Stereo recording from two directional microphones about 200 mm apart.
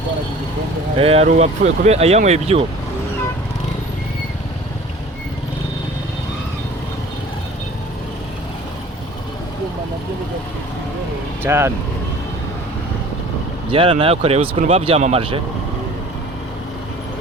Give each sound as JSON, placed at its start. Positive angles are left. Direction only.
{"t": 0.9, "sound": "speech", "side_deg": -30}
{"t": 11.4, "sound": "speech", "side_deg": -10}
{"t": 13.7, "sound": "speech", "side_deg": -25}